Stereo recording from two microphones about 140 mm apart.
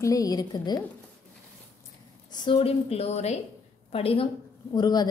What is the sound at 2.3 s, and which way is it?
A woman's voice, 40° left (ahead or behind).